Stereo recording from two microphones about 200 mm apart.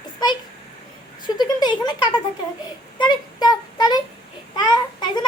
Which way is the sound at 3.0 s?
20° left (ahead or behind).